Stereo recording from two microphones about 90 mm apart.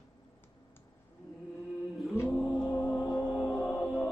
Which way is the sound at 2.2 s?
10° left (ahead or behind).